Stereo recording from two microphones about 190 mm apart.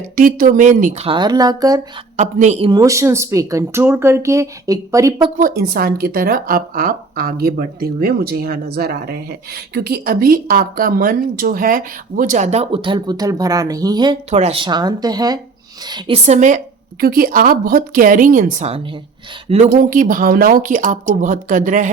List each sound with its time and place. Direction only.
0.2 s speech: 45° right (ahead or behind)
1.0 s speech: 25° right (ahead or behind)
2.1 s a woman's voice: 35° right (ahead or behind)
2.6 s speech: 20° right (ahead or behind)
5.4 s speech: 50° right (ahead or behind); by 14.2 s 20° right (ahead or behind)
14.3 s a woman's voice: 35° right (ahead or behind)
17.0 s a woman's voice: 50° right (ahead or behind)
19.8 s speech: 45° right (ahead or behind)